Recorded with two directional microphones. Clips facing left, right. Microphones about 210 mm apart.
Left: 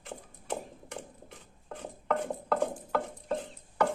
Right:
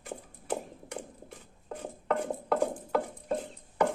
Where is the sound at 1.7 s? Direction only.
10° right (ahead or behind).